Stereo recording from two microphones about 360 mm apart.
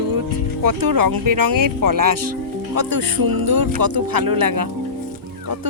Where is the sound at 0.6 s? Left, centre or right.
Right.